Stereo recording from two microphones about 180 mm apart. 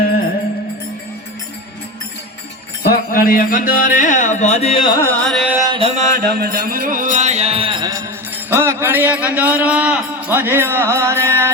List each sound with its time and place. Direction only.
2.8 s music: 55° left (ahead or behind); by 4.9 s 30° left (ahead or behind)
4.9 s carnatic music: 10° left (ahead or behind)
5.3 s carnatic music: centre (ahead or behind)
5.5 s music: 25° right (ahead or behind)
5.9 s music: 45° right (ahead or behind); by 8.0 s 20° right (ahead or behind)
8.4 s a man's voice: 15° right (ahead or behind)